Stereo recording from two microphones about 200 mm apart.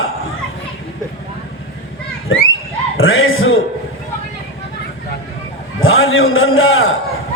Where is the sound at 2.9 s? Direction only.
90° left.